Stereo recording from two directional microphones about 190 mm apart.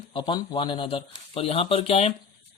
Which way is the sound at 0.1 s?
25° left (ahead or behind).